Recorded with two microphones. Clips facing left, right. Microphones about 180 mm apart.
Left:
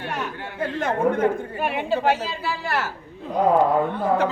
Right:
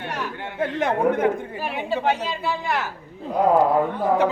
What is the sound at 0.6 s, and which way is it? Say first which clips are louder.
Speech: right 1 dB; 15° right (ahead or behind).